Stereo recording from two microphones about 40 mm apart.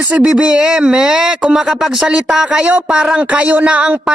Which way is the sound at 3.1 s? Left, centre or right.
Right.